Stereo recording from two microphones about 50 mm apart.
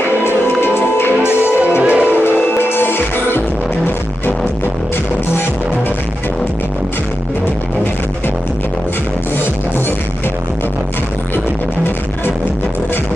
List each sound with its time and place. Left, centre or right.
0.2 s music: left
1.8 s music: right
2.0 s music: left